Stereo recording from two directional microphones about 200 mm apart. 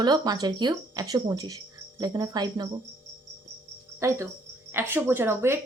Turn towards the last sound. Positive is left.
turn(degrees=-10)  # may be behind; listen again after turning